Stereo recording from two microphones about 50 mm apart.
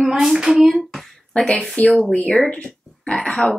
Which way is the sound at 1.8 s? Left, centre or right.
Left.